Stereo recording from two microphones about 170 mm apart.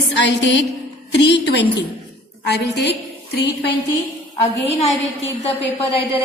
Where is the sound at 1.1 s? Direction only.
90° left.